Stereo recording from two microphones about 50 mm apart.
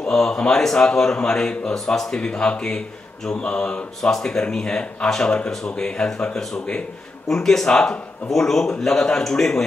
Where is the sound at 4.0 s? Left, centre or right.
Centre.